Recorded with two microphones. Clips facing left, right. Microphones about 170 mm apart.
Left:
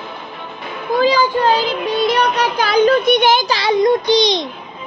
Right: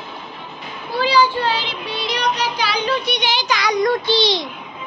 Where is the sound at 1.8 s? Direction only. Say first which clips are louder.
Left 6 dB; 50° left (ahead or behind).